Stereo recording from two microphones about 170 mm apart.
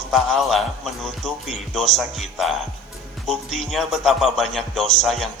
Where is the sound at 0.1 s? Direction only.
Centre (ahead or behind).